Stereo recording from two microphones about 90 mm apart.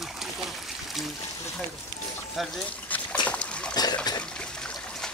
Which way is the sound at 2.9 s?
15° left (ahead or behind).